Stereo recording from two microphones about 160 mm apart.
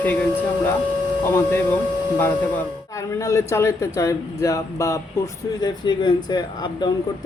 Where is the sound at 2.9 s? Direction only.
20° left (ahead or behind).